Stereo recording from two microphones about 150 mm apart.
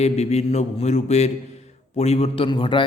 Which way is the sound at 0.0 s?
45° left (ahead or behind).